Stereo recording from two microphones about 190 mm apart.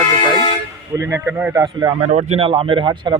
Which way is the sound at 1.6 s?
20° right (ahead or behind).